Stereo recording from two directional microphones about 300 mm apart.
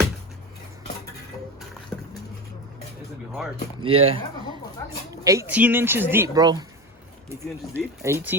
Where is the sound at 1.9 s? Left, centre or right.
Centre.